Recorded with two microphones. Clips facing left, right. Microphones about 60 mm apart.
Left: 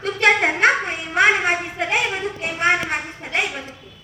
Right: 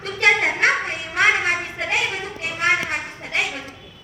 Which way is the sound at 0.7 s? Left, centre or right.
Centre.